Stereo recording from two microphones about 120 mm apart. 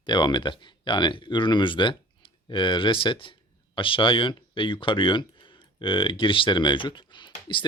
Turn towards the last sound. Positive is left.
turn(degrees=40)  # may be behind; listen again after turning